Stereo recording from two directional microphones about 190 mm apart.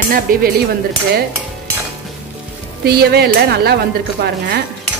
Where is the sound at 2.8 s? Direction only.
55° right (ahead or behind).